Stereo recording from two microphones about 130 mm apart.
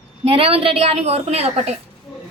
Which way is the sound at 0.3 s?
45° right (ahead or behind).